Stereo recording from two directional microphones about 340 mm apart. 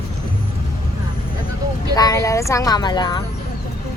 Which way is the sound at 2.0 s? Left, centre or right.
Centre.